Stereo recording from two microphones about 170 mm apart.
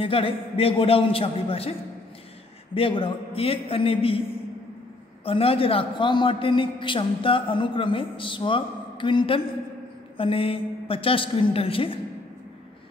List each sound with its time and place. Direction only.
0.0 s a man's voice: 35° left (ahead or behind)
5.2 s a man's voice: 35° left (ahead or behind)